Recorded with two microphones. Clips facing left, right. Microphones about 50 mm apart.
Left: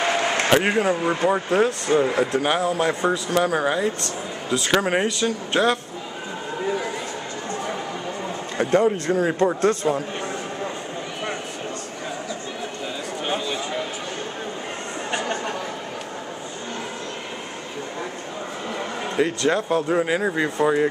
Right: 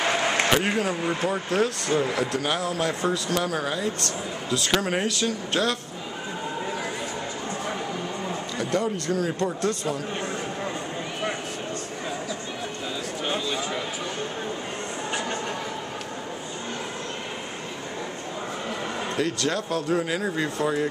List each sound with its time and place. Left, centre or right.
0.5 s speech: centre
8.5 s speech: left
13.2 s a sound: centre
19.1 s speech: left